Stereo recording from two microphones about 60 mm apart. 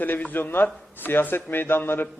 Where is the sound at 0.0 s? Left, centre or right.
Left.